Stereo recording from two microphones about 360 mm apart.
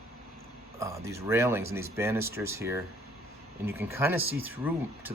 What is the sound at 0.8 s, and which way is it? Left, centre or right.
Speech, centre.